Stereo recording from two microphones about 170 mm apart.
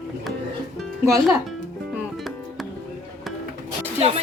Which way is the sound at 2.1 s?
Centre (ahead or behind).